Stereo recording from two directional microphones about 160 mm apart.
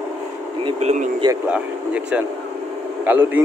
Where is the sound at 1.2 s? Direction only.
25° right (ahead or behind).